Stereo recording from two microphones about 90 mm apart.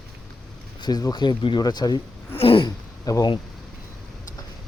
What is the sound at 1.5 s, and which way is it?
Speech, 50° left (ahead or behind).